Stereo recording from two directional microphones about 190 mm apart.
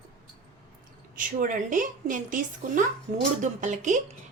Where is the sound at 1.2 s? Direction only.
45° right (ahead or behind).